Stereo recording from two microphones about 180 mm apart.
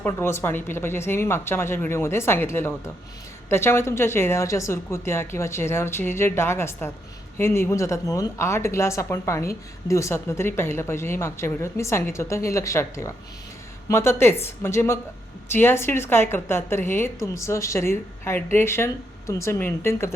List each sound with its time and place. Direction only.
0.0 s a woman's voice: 15° left (ahead or behind)